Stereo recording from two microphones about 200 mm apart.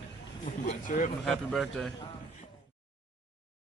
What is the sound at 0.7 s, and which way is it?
Speech, 40° left (ahead or behind).